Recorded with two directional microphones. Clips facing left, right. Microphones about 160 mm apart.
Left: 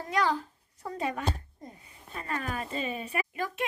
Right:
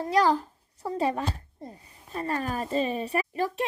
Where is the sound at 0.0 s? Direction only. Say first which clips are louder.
Right 5 dB; 35° right (ahead or behind).